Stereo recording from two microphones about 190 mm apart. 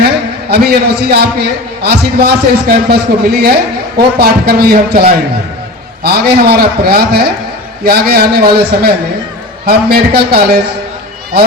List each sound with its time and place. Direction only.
0.5 s a man's voice: 55° right (ahead or behind)